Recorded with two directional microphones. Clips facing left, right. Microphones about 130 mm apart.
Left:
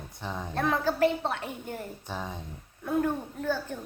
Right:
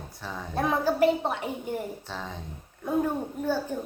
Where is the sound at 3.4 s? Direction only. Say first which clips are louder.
Right 3 dB; 10° right (ahead or behind).